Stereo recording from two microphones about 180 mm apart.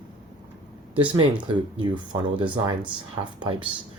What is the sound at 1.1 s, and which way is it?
Speech, 25° right (ahead or behind).